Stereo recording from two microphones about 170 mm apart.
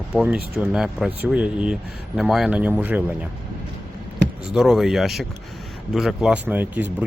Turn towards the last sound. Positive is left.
turn(degrees=-10)  # may be behind; listen again after turning